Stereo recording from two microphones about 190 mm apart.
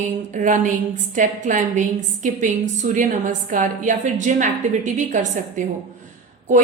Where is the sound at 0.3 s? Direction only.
40° right (ahead or behind).